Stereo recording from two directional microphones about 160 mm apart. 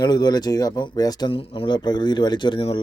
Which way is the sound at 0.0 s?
25° left (ahead or behind).